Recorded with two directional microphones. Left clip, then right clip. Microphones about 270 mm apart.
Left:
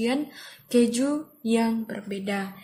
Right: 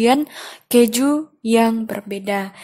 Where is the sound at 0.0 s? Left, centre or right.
Right.